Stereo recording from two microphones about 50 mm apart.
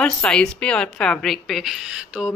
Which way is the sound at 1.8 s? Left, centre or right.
Centre.